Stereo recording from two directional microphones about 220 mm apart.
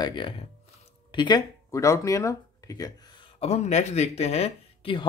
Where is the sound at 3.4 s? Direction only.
30° left (ahead or behind).